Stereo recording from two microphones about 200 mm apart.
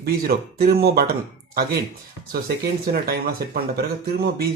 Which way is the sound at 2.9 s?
50° right (ahead or behind).